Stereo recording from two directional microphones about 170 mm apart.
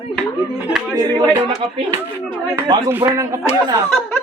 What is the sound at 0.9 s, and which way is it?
Speech, 20° right (ahead or behind).